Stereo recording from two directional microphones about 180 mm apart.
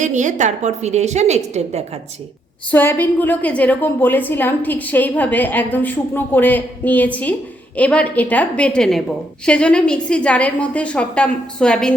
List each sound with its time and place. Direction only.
0.0 s a woman's voice: 40° right (ahead or behind)
2.7 s a woman's voice: 10° left (ahead or behind)